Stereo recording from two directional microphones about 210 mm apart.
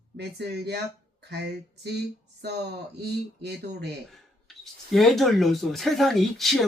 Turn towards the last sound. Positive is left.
turn(degrees=0)  # may be behind; listen again after turning